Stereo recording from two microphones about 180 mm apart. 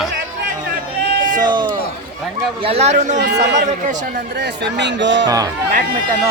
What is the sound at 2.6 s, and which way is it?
Speech, 35° right (ahead or behind).